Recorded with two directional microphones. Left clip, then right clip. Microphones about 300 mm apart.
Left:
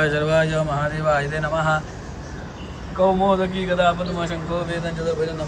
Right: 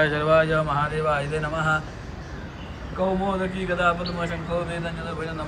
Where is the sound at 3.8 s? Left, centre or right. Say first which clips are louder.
Left 3 dB; centre.